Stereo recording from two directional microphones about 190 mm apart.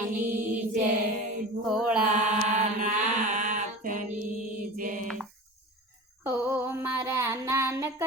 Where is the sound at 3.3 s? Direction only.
40° right (ahead or behind).